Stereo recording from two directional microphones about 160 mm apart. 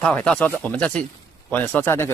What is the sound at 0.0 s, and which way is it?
A man's voice, 5° left (ahead or behind).